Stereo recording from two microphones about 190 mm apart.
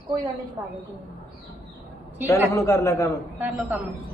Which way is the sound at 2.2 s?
15° left (ahead or behind).